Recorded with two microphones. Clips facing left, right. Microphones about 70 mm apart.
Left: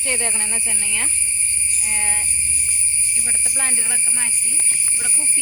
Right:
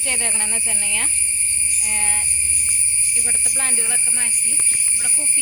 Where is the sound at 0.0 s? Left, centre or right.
Left.